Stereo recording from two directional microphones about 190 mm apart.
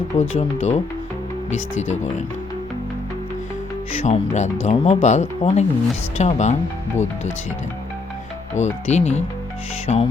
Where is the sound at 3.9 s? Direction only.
35° left (ahead or behind).